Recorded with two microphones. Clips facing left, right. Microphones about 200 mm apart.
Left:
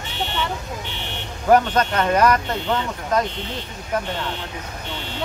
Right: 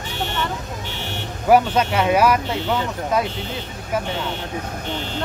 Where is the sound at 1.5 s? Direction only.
10° right (ahead or behind).